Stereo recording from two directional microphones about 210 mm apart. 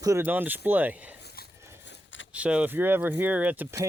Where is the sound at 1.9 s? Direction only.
60° left (ahead or behind).